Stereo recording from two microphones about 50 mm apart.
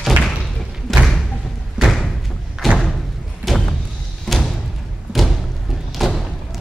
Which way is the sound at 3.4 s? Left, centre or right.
Right.